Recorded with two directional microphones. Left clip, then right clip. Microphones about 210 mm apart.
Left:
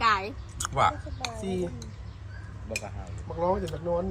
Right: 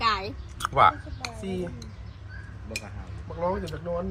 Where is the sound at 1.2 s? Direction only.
50° left (ahead or behind).